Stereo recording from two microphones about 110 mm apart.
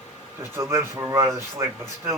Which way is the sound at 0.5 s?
25° right (ahead or behind).